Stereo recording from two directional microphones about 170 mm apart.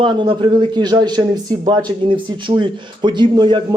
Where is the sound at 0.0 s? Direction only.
30° right (ahead or behind).